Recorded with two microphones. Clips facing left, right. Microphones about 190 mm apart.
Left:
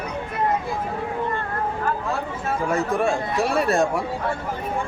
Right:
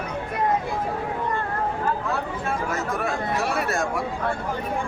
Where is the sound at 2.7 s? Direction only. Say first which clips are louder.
Left 5 dB; 30° left (ahead or behind).